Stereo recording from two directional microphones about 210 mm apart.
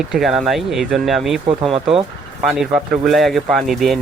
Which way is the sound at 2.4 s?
Centre (ahead or behind).